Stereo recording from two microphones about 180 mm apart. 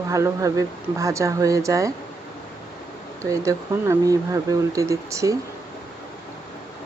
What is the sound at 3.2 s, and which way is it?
Speech, 15° right (ahead or behind).